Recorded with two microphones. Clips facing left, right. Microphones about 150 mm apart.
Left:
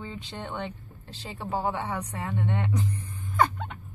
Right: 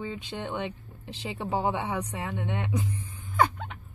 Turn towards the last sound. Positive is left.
turn(degrees=-5)  # may be behind; listen again after turning